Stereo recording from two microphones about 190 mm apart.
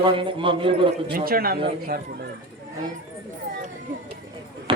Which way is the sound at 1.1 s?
50° right (ahead or behind).